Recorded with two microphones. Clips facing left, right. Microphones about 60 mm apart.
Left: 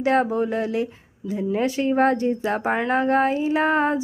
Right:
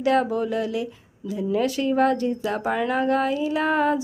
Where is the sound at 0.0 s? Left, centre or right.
Left.